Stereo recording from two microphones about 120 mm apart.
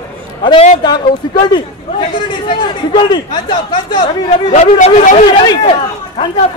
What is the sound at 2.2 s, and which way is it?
Speech, 40° left (ahead or behind).